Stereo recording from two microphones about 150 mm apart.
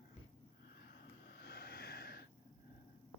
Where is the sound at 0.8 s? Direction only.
90° left.